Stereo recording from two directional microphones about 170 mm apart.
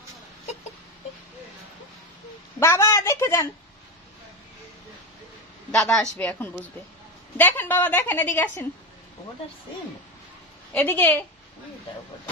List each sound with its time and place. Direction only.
2.6 s a woman's voice: 15° left (ahead or behind)
5.7 s a woman's voice: 5° left (ahead or behind)
10.7 s a woman's voice: 10° left (ahead or behind)